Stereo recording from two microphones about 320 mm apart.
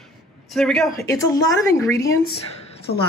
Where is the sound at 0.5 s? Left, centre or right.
Centre.